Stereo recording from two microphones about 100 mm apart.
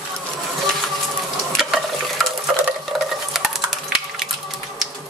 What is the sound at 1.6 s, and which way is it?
Stir, 5° right (ahead or behind).